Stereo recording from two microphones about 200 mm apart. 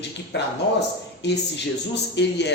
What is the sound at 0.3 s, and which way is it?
Speech, 60° left (ahead or behind).